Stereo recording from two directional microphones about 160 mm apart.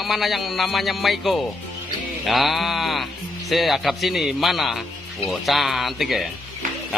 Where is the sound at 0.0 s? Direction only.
Centre (ahead or behind).